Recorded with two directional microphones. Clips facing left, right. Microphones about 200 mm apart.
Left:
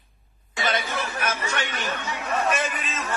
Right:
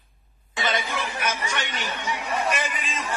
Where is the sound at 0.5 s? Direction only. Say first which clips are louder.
Left 1 dB; 20° right (ahead or behind).